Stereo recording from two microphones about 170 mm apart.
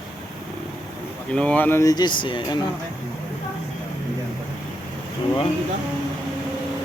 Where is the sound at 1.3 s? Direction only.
5° left (ahead or behind); by 2.6 s 25° left (ahead or behind).